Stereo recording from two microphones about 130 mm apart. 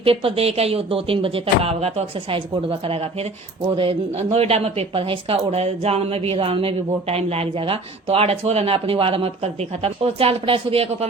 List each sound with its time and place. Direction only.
0.0 s a woman's voice: 45° right (ahead or behind)